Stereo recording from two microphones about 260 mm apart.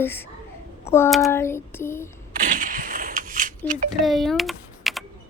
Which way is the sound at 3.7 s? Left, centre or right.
Right.